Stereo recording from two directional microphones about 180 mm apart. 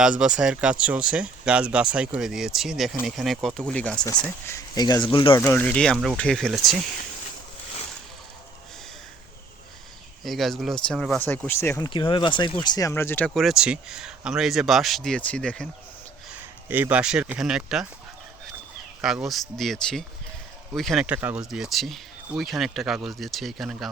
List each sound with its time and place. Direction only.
0.0 s speech: 5° right (ahead or behind); by 5.3 s 25° left (ahead or behind)
5.3 s speech: 10° left (ahead or behind)
10.2 s speech: centre (ahead or behind)
11.9 s speech: 30° left (ahead or behind); by 15.7 s 5° left (ahead or behind)
16.3 s speech: 10° right (ahead or behind)
19.0 s speech: centre (ahead or behind)